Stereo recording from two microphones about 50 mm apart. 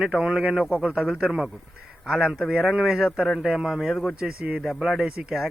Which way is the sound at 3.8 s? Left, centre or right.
Centre.